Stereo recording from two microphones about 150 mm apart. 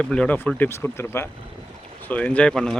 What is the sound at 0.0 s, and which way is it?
Speech, 5° left (ahead or behind).